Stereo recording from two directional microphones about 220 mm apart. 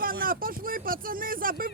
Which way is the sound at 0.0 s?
40° right (ahead or behind).